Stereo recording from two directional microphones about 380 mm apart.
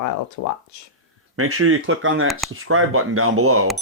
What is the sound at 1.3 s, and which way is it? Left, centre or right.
Speech, right.